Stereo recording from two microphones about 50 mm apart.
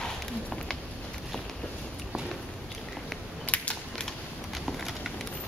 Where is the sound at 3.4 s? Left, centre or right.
Left.